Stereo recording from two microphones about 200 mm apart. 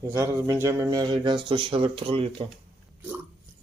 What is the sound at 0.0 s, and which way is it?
A man's voice, 15° right (ahead or behind).